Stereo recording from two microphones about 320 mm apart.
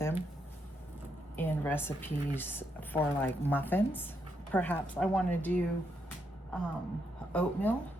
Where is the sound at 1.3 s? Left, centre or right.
Centre.